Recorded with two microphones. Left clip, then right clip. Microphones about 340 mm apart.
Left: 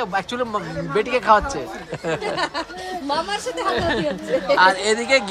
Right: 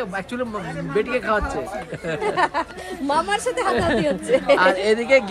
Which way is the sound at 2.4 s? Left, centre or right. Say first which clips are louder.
Right 3 dB; centre.